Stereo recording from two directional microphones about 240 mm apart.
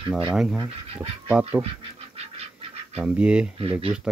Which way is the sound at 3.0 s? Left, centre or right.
Centre.